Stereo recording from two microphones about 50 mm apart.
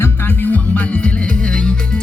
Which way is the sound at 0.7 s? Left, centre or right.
Left.